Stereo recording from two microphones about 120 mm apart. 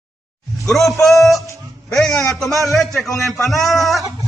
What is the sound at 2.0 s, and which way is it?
A man's voice, 5° left (ahead or behind).